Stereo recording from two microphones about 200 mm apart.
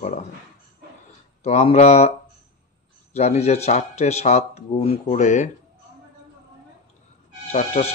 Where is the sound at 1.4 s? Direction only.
30° left (ahead or behind).